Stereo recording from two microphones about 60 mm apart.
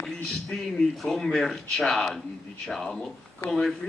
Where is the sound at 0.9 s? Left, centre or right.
Centre.